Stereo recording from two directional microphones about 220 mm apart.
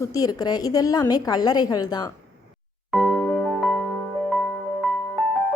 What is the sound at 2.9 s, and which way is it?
Music, centre (ahead or behind).